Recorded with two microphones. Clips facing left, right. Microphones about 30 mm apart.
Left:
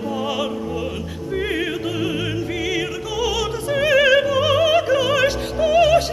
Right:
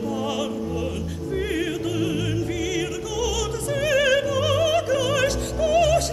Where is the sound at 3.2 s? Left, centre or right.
Left.